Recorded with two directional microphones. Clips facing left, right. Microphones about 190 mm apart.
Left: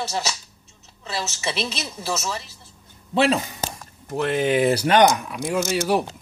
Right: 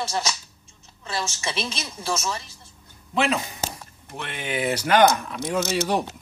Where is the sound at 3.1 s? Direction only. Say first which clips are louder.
Left 4 dB; 35° left (ahead or behind).